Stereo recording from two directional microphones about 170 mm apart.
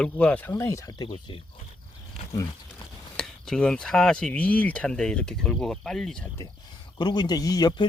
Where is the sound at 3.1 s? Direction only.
5° left (ahead or behind).